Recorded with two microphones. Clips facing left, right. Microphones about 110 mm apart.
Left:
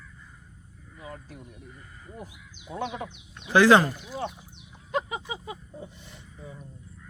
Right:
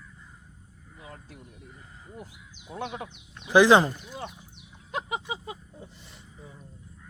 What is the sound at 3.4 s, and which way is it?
Speech, 15° right (ahead or behind).